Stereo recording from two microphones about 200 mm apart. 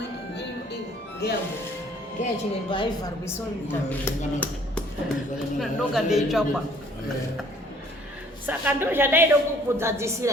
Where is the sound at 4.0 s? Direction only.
10° left (ahead or behind).